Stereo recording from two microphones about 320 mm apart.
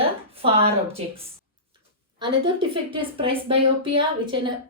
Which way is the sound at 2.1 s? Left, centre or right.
Centre.